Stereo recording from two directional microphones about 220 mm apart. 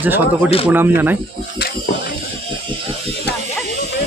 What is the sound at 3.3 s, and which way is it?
Electric shaver, 50° left (ahead or behind).